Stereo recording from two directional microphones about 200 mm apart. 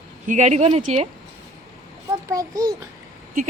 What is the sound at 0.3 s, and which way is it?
Speech, 35° right (ahead or behind).